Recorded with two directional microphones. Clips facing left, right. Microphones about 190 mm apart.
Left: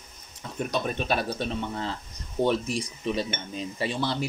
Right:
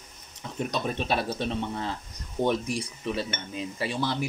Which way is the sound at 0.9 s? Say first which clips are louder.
Even; 25° right (ahead or behind).